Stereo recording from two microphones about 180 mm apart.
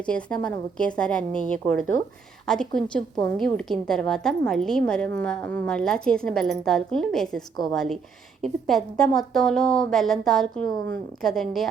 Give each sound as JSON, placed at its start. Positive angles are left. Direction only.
{"t": 0.0, "sound": "a woman's voice", "side_deg": 5}